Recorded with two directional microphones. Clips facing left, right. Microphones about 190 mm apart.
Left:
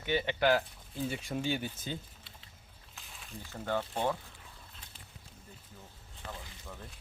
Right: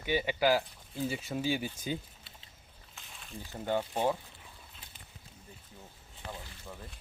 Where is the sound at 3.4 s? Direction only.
15° right (ahead or behind).